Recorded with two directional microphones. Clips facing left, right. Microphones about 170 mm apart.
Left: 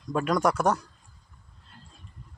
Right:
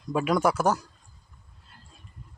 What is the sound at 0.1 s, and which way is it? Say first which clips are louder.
Speech: right 1 dB; 5° right (ahead or behind).